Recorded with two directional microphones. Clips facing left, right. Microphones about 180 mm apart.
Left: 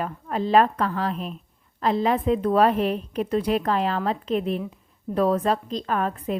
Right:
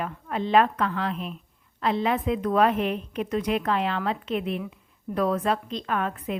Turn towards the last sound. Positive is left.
turn(degrees=35)  # may be behind; listen again after turning